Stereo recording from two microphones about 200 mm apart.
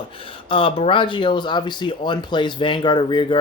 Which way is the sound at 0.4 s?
25° left (ahead or behind).